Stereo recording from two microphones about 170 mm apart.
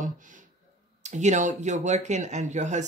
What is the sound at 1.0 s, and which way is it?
A man's voice, 45° right (ahead or behind).